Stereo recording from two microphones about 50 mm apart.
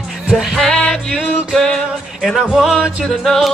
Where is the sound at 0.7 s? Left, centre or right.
Centre.